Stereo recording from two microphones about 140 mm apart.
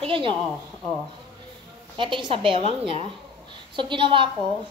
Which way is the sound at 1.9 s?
35° right (ahead or behind).